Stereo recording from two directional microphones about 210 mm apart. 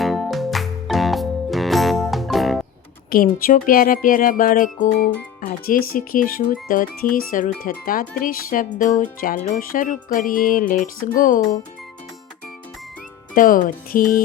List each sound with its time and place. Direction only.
0.0 s music: centre (ahead or behind)
3.3 s speech: 45° left (ahead or behind)
13.3 s speech: 40° left (ahead or behind)